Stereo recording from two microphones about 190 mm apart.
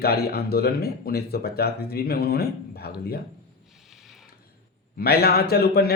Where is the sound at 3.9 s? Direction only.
Centre (ahead or behind).